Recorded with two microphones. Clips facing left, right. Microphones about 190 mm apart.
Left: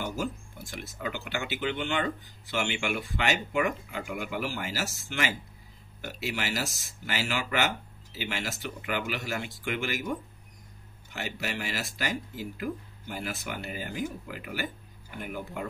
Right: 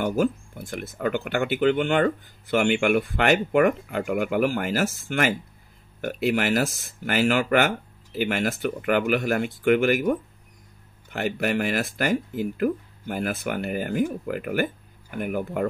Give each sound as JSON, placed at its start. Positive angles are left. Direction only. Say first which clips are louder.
{"t": 0.0, "sound": "speech", "louder": "right 10 dB", "side_deg": -55}